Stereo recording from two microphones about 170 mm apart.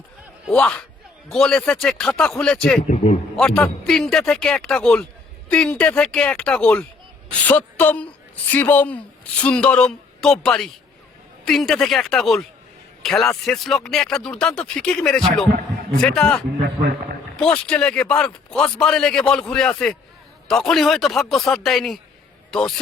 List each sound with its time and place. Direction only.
0.4 s speech: 5° left (ahead or behind)
2.8 s a man's voice: 40° left (ahead or behind)
3.3 s a woman's voice: 5° left (ahead or behind)
16.6 s a man's voice: 75° right (ahead or behind)
17.4 s speech: 5° left (ahead or behind)